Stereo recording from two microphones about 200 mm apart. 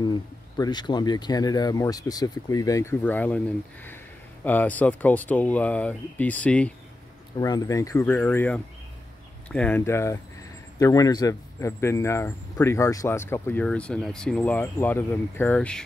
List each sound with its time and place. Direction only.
0.0 s a man's voice: 20° left (ahead or behind)
7.3 s a man's voice: 20° left (ahead or behind)